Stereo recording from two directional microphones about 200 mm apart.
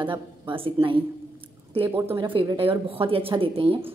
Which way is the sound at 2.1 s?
25° right (ahead or behind).